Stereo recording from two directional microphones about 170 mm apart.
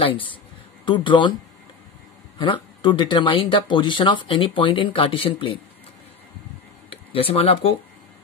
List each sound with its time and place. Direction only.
0.0 s speech: 30° left (ahead or behind)
2.3 s speech: 30° left (ahead or behind)
6.9 s speech: 35° left (ahead or behind)